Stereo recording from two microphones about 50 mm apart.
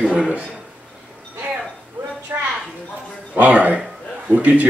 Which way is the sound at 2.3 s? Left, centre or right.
Right.